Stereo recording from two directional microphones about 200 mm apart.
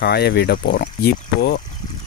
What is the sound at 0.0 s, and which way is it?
Speech, 55° left (ahead or behind).